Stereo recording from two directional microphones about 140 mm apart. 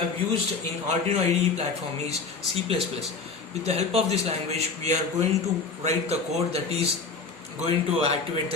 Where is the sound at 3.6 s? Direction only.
50° right (ahead or behind).